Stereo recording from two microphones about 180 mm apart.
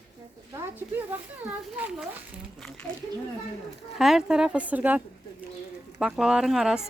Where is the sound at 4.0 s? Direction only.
5° right (ahead or behind).